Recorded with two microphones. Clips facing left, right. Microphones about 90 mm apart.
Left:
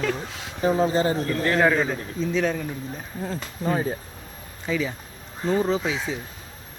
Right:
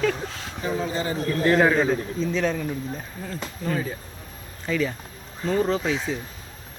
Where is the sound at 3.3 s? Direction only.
30° left (ahead or behind).